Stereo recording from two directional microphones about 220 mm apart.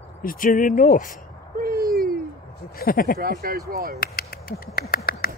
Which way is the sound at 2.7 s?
40° left (ahead or behind).